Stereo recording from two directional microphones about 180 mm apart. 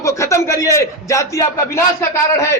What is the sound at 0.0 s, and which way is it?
A man's voice, 15° left (ahead or behind).